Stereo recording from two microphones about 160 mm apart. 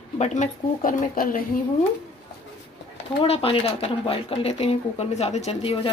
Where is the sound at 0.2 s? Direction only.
50° left (ahead or behind).